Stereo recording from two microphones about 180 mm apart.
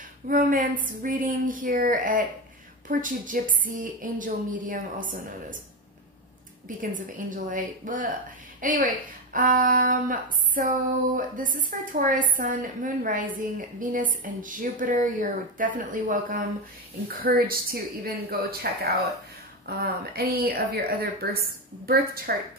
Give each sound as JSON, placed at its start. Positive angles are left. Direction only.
{"t": 0.3, "sound": "a woman's voice", "side_deg": -50}
{"t": 6.8, "sound": "a woman's voice", "side_deg": -50}